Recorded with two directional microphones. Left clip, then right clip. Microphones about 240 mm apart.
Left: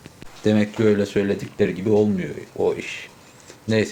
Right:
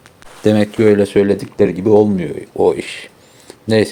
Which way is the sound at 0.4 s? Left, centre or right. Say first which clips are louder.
Right 7 dB; right.